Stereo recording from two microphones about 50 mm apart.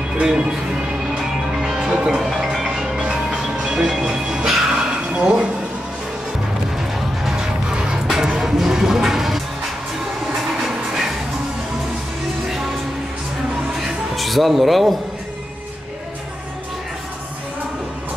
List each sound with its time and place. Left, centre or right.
0.2 s speech: centre
1.1 s music: centre
5.1 s a sound: centre
7.2 s music: centre
14.1 s speech: centre